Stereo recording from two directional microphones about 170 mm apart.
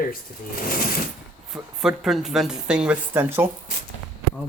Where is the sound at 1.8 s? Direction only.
Centre (ahead or behind).